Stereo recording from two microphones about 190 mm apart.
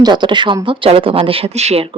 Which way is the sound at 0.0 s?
25° right (ahead or behind).